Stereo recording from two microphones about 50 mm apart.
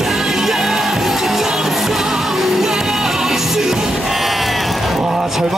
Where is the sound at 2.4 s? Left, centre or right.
Centre.